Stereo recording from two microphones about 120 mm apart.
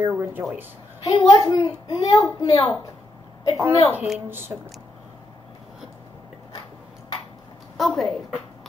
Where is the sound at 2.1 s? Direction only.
30° left (ahead or behind).